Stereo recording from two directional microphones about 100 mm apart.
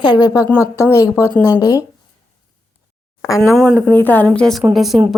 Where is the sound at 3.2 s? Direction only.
30° left (ahead or behind).